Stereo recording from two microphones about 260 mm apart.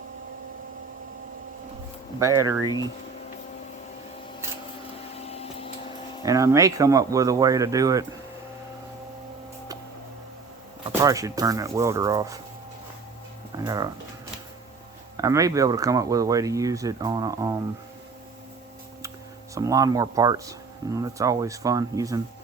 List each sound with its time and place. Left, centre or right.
2.1 s speech: centre
2.6 s speech: centre
5.2 s vacuum cleaner: left
6.2 s speech: centre
11.0 s speech: centre
13.7 s speech: centre
15.2 s speech: centre
19.5 s speech: centre